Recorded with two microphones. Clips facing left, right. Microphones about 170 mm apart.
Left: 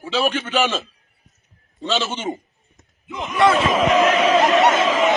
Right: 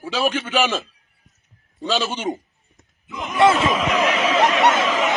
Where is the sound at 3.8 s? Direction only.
45° left (ahead or behind).